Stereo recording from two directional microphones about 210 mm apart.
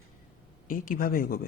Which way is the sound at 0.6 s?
40° left (ahead or behind).